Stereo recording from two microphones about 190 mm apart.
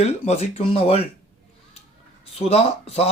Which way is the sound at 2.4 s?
35° left (ahead or behind).